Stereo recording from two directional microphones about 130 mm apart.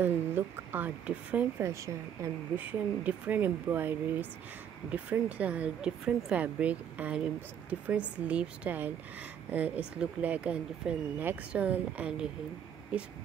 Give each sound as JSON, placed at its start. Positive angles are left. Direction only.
{"t": 0.0, "sound": "speech", "side_deg": -15}
{"t": 1.6, "sound": "speech", "side_deg": -20}
{"t": 2.5, "sound": "speech", "side_deg": -10}